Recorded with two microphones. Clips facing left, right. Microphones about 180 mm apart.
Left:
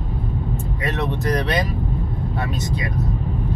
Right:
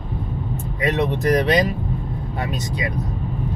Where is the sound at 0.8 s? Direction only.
20° right (ahead or behind).